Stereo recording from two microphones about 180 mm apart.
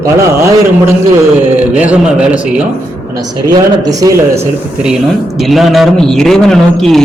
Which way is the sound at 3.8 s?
20° right (ahead or behind).